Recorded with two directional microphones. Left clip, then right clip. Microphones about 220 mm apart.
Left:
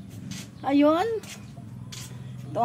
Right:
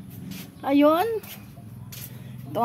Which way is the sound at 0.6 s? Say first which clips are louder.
Right 2 dB; 25° right (ahead or behind).